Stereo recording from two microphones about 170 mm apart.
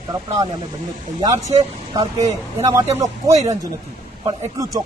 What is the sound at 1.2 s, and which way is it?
Speech, 25° right (ahead or behind).